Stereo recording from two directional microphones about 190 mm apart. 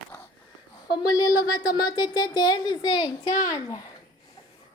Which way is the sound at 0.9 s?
20° left (ahead or behind).